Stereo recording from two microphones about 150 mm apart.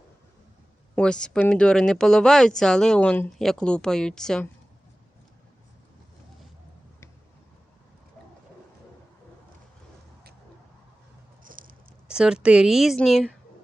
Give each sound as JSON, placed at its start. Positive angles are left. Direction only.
{"t": 0.9, "sound": "speech", "side_deg": 5}
{"t": 11.4, "sound": "patter", "side_deg": -65}
{"t": 12.0, "sound": "speech", "side_deg": -5}